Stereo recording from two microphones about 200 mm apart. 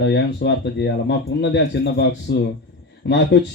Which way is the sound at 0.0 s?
60° left (ahead or behind).